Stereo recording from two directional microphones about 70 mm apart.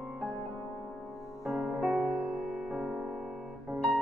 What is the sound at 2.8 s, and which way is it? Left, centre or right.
Music, centre.